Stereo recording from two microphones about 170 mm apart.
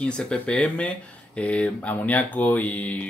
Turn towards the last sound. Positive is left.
turn(degrees=10)  # may be behind; listen again after turning